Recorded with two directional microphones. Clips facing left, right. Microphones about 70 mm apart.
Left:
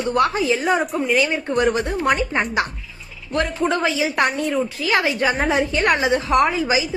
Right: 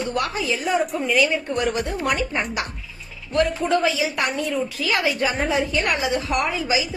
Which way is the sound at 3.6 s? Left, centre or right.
Left.